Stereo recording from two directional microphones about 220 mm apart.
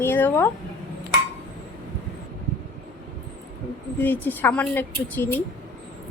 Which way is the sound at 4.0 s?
10° left (ahead or behind).